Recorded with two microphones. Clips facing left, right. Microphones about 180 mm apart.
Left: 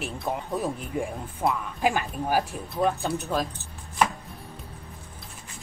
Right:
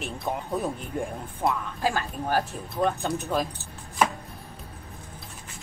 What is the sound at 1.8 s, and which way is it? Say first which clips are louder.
Speech: left 2 dB; 15° left (ahead or behind).